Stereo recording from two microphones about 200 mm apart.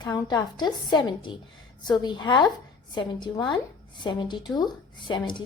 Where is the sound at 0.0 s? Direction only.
20° left (ahead or behind).